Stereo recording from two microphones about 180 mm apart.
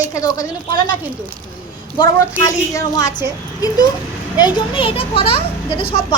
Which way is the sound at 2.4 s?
20° left (ahead or behind).